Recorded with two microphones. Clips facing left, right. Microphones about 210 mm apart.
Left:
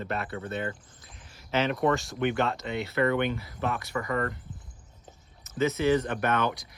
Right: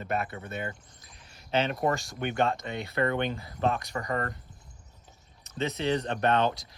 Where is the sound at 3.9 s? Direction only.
40° right (ahead or behind).